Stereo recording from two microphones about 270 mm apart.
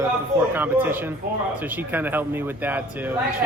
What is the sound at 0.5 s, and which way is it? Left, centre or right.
Speech, centre.